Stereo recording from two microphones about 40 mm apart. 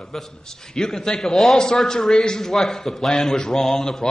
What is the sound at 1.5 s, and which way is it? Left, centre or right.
A man's voice, centre.